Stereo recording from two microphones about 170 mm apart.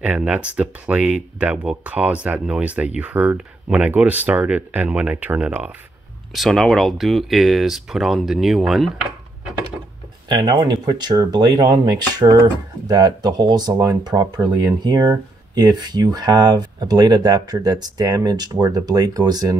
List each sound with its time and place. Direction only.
0.0 s speech: 5° right (ahead or behind)
10.2 s speech: 25° right (ahead or behind)